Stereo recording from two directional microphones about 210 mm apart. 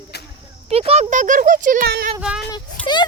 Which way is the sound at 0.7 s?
30° right (ahead or behind).